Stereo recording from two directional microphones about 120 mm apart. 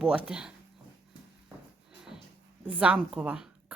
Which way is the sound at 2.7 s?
10° right (ahead or behind).